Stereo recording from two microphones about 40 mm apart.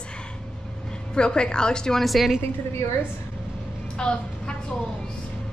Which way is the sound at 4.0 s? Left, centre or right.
Left.